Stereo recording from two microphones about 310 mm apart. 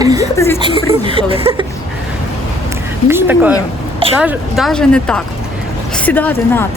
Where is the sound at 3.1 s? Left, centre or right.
Centre.